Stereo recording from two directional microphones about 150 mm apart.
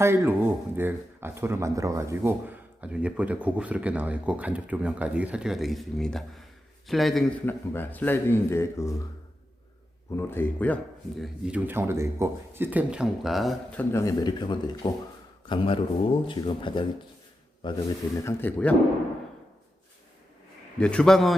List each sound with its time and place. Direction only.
0.0 s a man's voice: 15° right (ahead or behind); by 7.3 s centre (ahead or behind)
7.4 s speech: 15° left (ahead or behind)
10.1 s speech: 15° left (ahead or behind)
11.2 s a man's voice: 5° right (ahead or behind)
13.7 s speech: 20° left (ahead or behind)
18.2 s speech: 15° left (ahead or behind)
20.7 s a man's voice: 5° left (ahead or behind)